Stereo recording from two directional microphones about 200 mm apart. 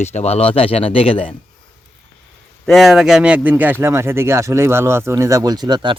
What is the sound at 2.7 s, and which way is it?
A man's voice, centre (ahead or behind).